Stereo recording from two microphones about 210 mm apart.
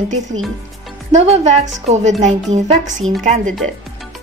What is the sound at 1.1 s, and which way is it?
A woman's voice, 30° right (ahead or behind).